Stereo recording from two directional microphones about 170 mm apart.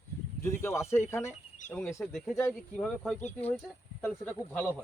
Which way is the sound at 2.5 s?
Centre (ahead or behind).